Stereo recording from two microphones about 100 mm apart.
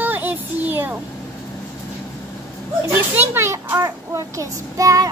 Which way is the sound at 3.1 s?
20° right (ahead or behind).